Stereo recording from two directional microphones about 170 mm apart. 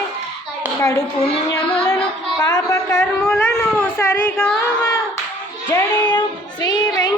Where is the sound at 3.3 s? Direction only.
10° left (ahead or behind).